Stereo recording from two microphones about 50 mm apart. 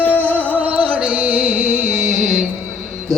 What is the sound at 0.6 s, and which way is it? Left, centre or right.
Music, right.